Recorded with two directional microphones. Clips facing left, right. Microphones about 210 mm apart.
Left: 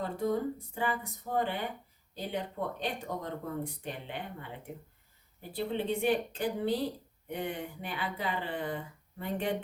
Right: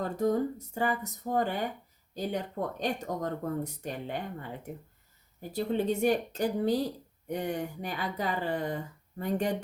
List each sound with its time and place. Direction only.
0.0 s speech: 45° right (ahead or behind)